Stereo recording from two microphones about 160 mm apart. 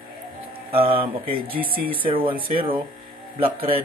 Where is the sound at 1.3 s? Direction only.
70° right (ahead or behind).